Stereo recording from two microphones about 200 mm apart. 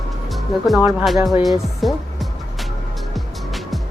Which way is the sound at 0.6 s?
5° right (ahead or behind).